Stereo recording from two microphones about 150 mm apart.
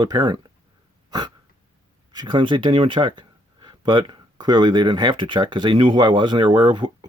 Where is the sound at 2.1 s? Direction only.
30° right (ahead or behind).